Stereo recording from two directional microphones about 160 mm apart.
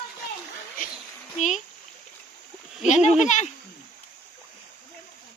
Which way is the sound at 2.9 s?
45° left (ahead or behind).